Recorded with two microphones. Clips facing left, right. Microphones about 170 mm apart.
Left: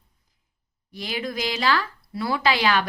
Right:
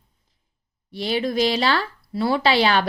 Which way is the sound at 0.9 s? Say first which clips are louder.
Right 8 dB; 30° right (ahead or behind).